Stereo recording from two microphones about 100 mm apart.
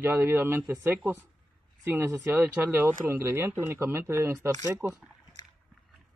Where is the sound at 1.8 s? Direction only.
25° right (ahead or behind).